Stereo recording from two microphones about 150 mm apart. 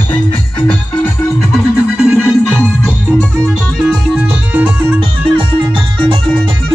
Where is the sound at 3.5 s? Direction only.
5° right (ahead or behind).